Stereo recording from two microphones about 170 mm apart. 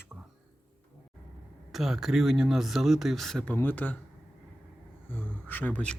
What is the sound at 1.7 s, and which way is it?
Speech, centre (ahead or behind).